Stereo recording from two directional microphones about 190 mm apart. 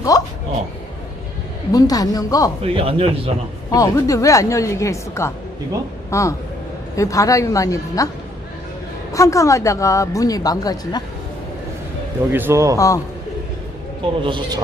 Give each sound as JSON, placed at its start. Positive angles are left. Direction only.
{"t": 0.1, "sound": "a sound", "side_deg": 20}
{"t": 1.7, "sound": "a man's voice", "side_deg": 20}
{"t": 2.6, "sound": "speech", "side_deg": -30}
{"t": 3.7, "sound": "a woman's voice", "side_deg": 15}
{"t": 9.1, "sound": "a woman's voice", "side_deg": 15}
{"t": 12.3, "sound": "a man's voice", "side_deg": -10}
{"t": 12.7, "sound": "a woman's voice", "side_deg": 15}
{"t": 14.2, "sound": "speech", "side_deg": -25}